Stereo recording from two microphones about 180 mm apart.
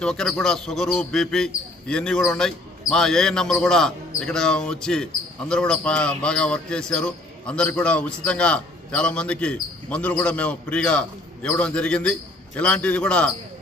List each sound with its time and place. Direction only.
0.0 s speech: 5° left (ahead or behind)